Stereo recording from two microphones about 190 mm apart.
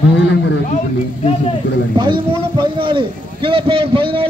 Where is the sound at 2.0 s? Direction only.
25° right (ahead or behind).